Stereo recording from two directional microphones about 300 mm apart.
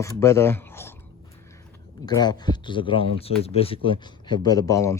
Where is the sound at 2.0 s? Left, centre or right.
Centre.